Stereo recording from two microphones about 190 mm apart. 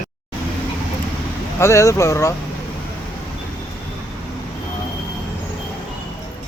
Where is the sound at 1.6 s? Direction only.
15° left (ahead or behind).